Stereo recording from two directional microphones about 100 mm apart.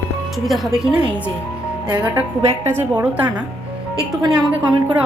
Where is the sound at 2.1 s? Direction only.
25° right (ahead or behind).